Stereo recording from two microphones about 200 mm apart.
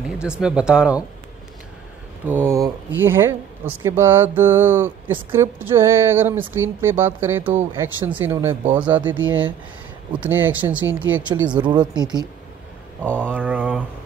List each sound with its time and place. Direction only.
0.2 s speech: 5° right (ahead or behind)
2.2 s speech: 10° right (ahead or behind)
11.4 s speech: 25° right (ahead or behind)
13.0 s speech: 5° left (ahead or behind)
13.3 s speech: 10° right (ahead or behind)